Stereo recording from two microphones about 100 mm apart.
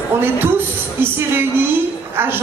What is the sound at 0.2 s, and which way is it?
A woman's voice, 20° right (ahead or behind).